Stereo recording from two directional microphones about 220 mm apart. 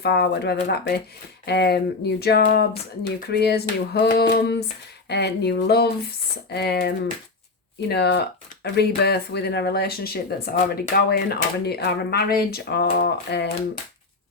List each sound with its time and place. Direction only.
0.0 s speech: 45° left (ahead or behind)